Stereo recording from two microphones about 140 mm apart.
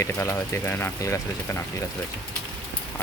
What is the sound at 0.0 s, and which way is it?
Speech, 20° left (ahead or behind).